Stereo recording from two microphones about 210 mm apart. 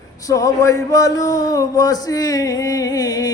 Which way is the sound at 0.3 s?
15° left (ahead or behind).